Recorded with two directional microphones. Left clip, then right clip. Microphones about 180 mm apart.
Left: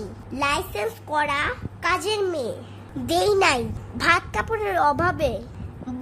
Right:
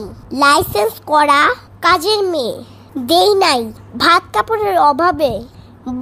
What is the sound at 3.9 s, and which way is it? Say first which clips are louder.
A child's voice: right 9 dB; 30° right (ahead or behind).